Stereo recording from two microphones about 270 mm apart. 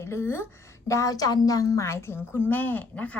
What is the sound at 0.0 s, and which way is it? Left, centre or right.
A woman's voice, centre.